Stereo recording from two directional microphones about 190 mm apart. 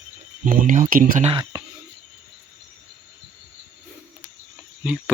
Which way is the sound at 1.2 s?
30° right (ahead or behind).